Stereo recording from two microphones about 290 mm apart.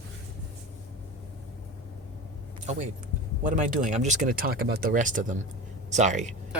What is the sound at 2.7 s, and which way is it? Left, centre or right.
Speech, right.